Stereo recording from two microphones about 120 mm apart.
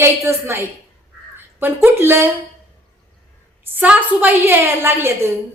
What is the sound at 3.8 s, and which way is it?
A woman's voice, 10° right (ahead or behind).